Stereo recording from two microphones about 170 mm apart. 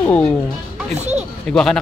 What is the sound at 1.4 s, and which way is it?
Speech, 5° left (ahead or behind).